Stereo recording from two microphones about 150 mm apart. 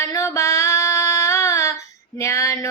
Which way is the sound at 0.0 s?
20° left (ahead or behind).